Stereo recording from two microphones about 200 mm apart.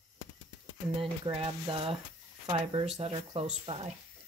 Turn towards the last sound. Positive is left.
turn(degrees=-30)  # may be behind; listen again after turning